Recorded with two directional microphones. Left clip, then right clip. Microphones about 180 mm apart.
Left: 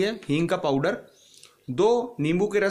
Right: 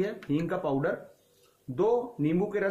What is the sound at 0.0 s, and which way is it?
Speech, 50° left (ahead or behind).